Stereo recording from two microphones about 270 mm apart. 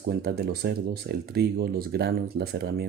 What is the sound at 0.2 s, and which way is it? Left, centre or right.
Speech, right.